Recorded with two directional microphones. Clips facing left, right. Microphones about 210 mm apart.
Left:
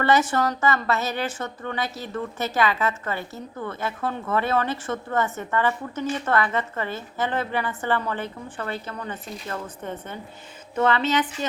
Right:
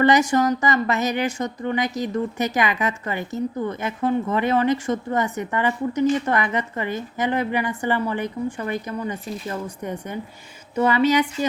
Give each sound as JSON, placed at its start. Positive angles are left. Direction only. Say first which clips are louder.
{"t": 0.0, "sound": "a woman's voice", "louder": "right 4 dB", "side_deg": -15}